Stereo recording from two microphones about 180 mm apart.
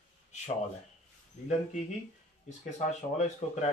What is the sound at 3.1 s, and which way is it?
Speech, 40° left (ahead or behind).